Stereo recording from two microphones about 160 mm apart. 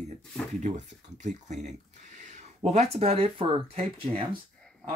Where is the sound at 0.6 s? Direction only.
50° right (ahead or behind); by 4.4 s 35° right (ahead or behind).